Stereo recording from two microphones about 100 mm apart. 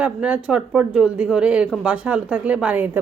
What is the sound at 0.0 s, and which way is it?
Speech, 15° right (ahead or behind).